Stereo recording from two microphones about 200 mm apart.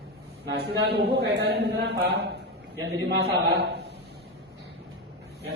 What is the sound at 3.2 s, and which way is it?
Speech, 55° right (ahead or behind).